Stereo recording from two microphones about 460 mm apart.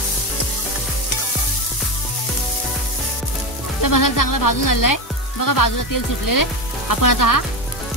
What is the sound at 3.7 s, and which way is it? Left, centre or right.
Speech, left.